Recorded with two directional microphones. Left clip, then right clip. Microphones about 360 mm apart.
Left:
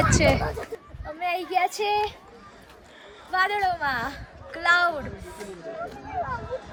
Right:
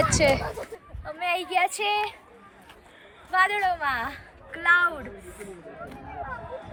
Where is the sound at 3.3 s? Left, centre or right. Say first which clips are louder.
Right 1 dB; centre.